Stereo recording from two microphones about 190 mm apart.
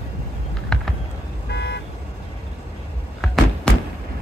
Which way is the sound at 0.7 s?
5° left (ahead or behind).